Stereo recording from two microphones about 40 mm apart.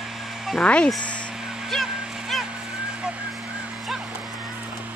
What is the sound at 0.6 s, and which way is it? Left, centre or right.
Speech, left.